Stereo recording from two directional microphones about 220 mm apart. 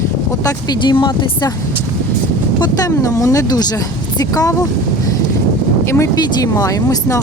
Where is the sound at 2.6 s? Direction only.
15° left (ahead or behind).